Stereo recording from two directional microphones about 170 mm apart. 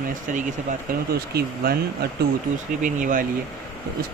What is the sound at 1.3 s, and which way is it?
Speech, 65° right (ahead or behind).